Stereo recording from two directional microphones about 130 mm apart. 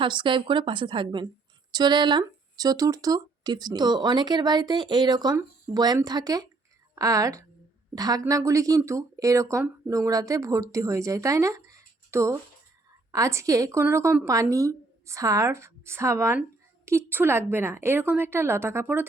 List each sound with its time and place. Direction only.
0.0 s speech: 40° right (ahead or behind); by 19.0 s 20° right (ahead or behind)